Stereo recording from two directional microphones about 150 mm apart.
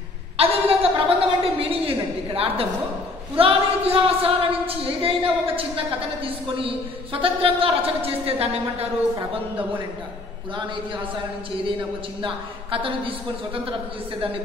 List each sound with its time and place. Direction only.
0.4 s a sound: 40° right (ahead or behind)
3.3 s speech: 40° right (ahead or behind)
12.2 s speech: 35° right (ahead or behind)